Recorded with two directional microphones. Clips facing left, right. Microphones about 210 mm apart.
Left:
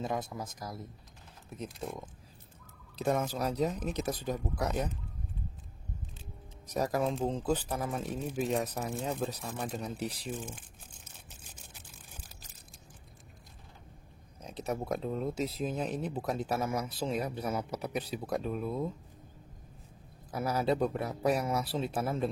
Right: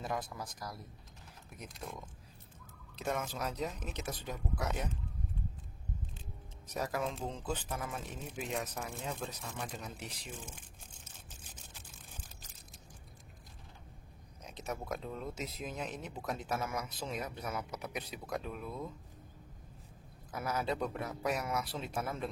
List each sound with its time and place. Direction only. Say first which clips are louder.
0.0 s speech: left 4 dB; 25° left (ahead or behind)
3.0 s speech: left 6 dB; 35° left (ahead or behind)
6.7 s speech: left 6 dB; 40° left (ahead or behind)
14.4 s speech: left 6 dB; 35° left (ahead or behind)
20.2 s speech: left 6 dB; 35° left (ahead or behind)